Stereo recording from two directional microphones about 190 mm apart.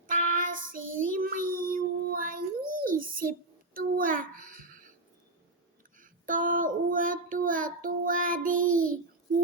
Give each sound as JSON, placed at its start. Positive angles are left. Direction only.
{"t": 0.1, "sound": "child singing", "side_deg": -45}
{"t": 2.8, "sound": "a sound", "side_deg": -50}
{"t": 6.0, "sound": "child singing", "side_deg": -45}